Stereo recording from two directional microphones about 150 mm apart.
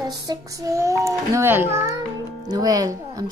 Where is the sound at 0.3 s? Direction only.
20° right (ahead or behind).